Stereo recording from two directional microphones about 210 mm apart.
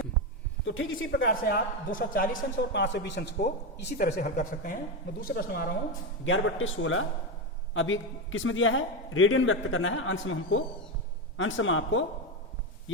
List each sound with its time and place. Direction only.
0.6 s a man's voice: 70° left (ahead or behind)
1.3 s speech: 45° left (ahead or behind)
6.2 s a man's voice: 65° left (ahead or behind)